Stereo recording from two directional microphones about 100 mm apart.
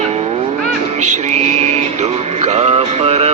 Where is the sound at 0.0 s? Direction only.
90° right.